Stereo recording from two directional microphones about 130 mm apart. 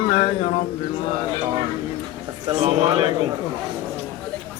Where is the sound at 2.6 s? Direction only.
50° right (ahead or behind).